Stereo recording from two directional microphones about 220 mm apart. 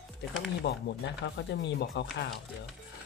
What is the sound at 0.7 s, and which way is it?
Speech, 50° left (ahead or behind).